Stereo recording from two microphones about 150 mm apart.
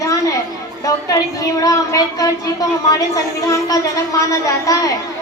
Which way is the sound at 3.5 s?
20° left (ahead or behind).